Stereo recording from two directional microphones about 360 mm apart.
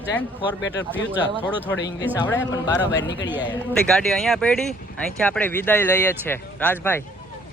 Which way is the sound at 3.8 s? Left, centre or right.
Centre.